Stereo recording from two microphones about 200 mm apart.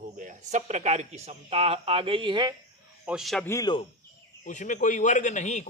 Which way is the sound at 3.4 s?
15° left (ahead or behind).